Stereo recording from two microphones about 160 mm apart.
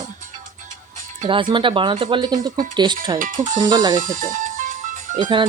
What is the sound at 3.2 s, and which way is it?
Speech, 60° right (ahead or behind).